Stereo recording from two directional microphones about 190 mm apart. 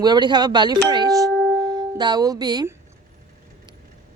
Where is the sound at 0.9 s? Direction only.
20° right (ahead or behind).